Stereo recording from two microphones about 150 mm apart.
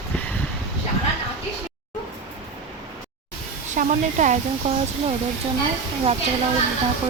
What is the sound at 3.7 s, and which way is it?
Speech, 55° right (ahead or behind).